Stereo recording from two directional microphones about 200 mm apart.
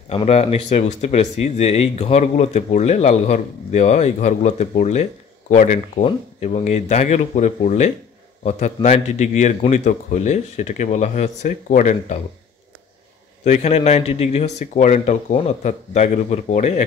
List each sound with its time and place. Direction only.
0.1 s speech: 30° left (ahead or behind)
13.4 s speech: 35° left (ahead or behind)